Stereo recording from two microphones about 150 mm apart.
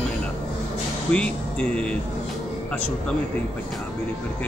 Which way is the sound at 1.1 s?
5° left (ahead or behind).